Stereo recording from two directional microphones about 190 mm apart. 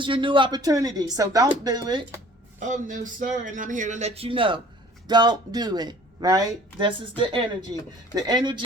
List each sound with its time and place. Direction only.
0.0 s speech: 25° right (ahead or behind)
2.6 s speech: 40° right (ahead or behind); by 8.6 s 25° right (ahead or behind)